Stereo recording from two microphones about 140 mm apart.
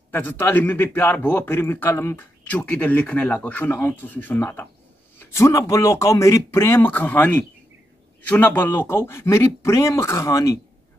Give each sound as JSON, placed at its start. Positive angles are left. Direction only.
{"t": 0.1, "sound": "a man's voice", "side_deg": 15}